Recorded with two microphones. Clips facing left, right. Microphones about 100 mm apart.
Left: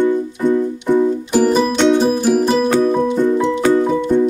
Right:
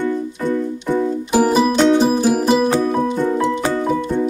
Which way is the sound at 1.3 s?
5° right (ahead or behind).